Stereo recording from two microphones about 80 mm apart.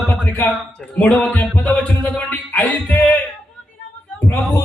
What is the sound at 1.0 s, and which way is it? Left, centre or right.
Music, centre.